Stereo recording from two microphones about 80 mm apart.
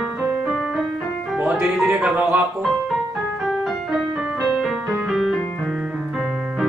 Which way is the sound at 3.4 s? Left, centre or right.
Centre.